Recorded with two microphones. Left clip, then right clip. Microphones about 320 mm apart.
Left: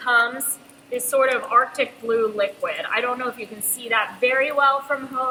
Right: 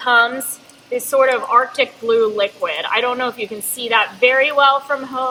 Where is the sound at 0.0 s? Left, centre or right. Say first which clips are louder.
Right 5 dB; right.